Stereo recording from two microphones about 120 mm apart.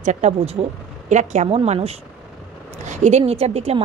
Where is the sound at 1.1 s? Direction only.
75° right (ahead or behind).